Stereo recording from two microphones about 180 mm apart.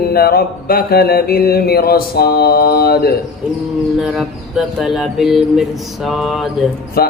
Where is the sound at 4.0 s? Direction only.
Centre (ahead or behind).